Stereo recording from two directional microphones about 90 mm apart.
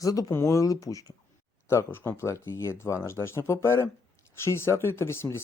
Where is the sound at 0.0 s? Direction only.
40° left (ahead or behind).